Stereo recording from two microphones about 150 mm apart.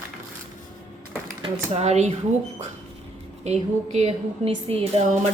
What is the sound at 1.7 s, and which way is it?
Speech, 45° right (ahead or behind).